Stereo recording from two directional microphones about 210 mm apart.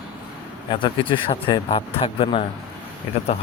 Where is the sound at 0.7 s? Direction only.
25° left (ahead or behind).